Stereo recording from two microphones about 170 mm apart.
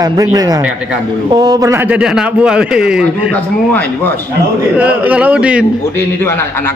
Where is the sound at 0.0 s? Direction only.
20° right (ahead or behind); by 3.0 s 5° right (ahead or behind).